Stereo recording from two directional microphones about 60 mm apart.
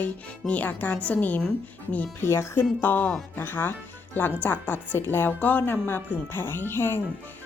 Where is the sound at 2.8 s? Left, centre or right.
Left.